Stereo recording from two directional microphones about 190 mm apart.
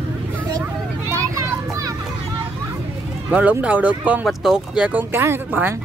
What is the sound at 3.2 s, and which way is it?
Speech, 10° right (ahead or behind).